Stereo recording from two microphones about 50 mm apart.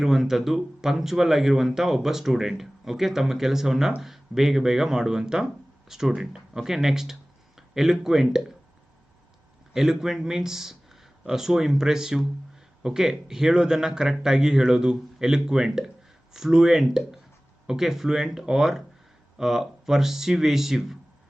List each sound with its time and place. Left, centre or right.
0.0 s speech: centre
9.7 s speech: centre